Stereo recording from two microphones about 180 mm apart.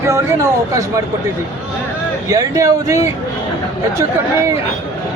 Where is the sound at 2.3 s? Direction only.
20° right (ahead or behind).